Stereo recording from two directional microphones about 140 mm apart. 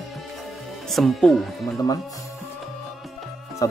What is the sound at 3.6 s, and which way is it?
Music, 25° left (ahead or behind).